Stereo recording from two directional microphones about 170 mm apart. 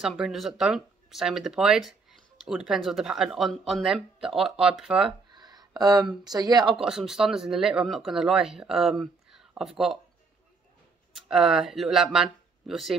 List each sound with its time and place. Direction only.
0.0 s speech: centre (ahead or behind)
5.3 s speech: 25° right (ahead or behind)
6.8 s speech: 5° right (ahead or behind)
11.1 s speech: 5° right (ahead or behind)